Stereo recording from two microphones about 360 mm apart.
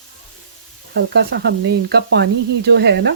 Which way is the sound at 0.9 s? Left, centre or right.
Right.